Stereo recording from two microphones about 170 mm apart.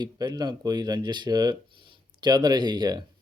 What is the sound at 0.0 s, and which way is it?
Speech, 25° right (ahead or behind).